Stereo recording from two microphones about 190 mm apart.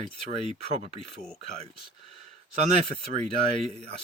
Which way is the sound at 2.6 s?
35° right (ahead or behind).